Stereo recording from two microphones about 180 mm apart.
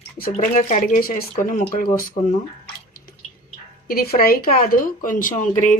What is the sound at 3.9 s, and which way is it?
Speech, 55° left (ahead or behind).